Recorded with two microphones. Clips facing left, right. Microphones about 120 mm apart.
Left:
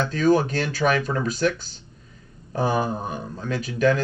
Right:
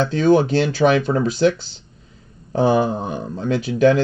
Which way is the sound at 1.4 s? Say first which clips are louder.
Right 6 dB; 85° right.